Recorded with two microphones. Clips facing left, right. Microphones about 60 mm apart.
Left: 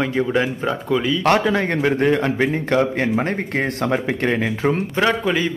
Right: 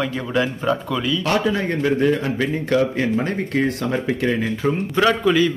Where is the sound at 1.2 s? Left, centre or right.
Left.